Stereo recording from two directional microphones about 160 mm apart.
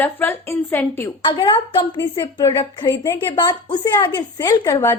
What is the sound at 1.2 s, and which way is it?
A woman's voice, 30° left (ahead or behind).